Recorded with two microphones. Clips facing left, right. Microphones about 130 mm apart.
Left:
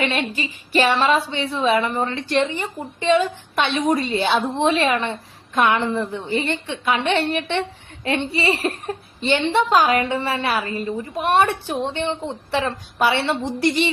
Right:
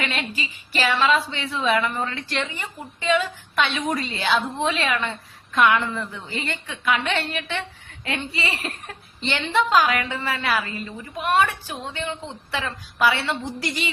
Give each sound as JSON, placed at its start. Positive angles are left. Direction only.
{"t": 0.0, "sound": "a woman's voice", "side_deg": 30}